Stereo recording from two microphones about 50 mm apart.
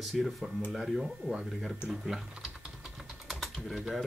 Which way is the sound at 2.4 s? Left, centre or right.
Centre.